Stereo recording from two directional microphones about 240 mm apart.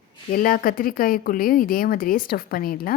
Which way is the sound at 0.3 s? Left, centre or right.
Left.